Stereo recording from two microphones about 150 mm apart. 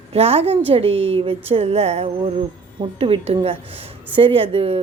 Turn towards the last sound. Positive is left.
turn(degrees=-40)  # may be behind; listen again after turning